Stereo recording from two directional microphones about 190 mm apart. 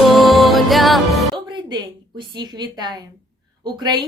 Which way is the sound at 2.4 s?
20° right (ahead or behind).